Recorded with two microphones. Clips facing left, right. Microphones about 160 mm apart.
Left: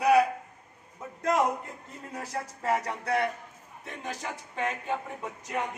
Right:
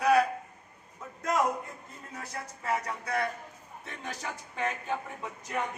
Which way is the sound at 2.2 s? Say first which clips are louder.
Left 5 dB; 35° left (ahead or behind).